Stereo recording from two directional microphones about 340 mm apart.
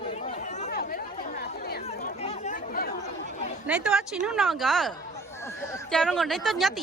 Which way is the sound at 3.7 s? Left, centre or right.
Centre.